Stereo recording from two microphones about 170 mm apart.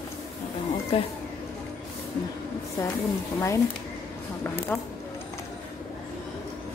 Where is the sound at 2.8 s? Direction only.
20° left (ahead or behind).